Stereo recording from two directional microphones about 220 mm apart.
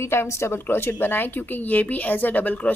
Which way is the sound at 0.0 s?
10° left (ahead or behind).